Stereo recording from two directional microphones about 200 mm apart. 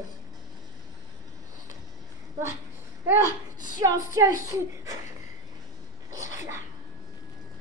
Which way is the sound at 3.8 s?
15° right (ahead or behind).